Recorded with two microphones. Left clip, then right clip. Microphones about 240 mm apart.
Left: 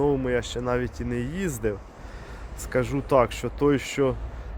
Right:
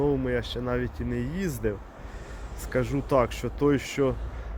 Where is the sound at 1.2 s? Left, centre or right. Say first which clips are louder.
Left 2 dB; centre.